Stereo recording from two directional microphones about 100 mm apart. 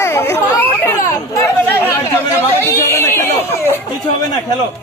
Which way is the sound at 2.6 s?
25° left (ahead or behind).